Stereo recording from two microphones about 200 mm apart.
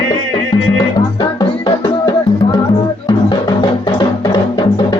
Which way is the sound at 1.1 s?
25° left (ahead or behind).